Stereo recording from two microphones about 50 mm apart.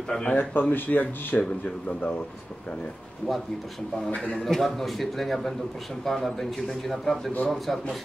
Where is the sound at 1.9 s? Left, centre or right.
Left.